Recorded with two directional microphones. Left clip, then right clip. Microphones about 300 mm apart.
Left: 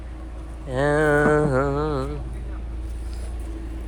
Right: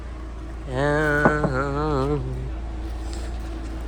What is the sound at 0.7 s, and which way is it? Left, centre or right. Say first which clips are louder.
Mantra: left 2 dB; centre.